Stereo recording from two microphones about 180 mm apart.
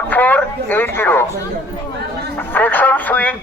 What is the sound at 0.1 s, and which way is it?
Speech, 10° left (ahead or behind).